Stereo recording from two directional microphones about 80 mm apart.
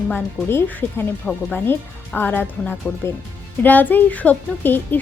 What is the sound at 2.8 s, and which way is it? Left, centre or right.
Speech, centre.